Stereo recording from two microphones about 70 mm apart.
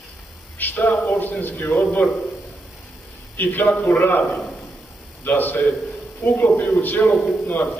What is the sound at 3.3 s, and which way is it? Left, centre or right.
Speech, left.